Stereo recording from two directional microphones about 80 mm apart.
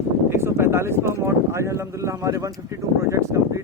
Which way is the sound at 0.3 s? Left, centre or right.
Right.